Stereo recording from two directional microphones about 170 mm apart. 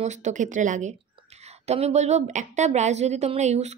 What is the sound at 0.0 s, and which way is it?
A woman's voice, 45° right (ahead or behind).